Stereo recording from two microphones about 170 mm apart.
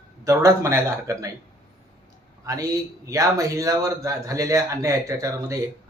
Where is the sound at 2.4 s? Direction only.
20° right (ahead or behind).